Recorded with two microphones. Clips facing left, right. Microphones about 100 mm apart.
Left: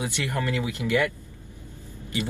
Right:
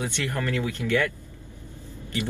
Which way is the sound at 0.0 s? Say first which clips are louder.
Even; 15° left (ahead or behind).